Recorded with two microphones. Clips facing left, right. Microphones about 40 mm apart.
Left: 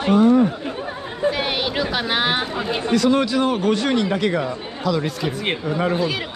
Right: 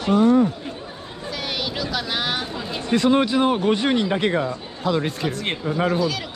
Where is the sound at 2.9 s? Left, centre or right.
Right.